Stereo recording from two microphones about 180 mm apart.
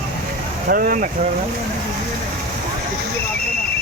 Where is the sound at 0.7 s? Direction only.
55° right (ahead or behind).